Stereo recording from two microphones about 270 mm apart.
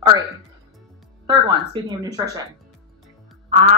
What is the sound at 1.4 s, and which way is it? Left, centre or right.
Speech, centre.